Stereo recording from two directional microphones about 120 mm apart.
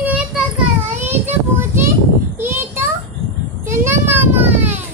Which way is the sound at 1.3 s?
20° right (ahead or behind).